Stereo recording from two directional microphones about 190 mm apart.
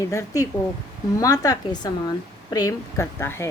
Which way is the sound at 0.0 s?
15° left (ahead or behind).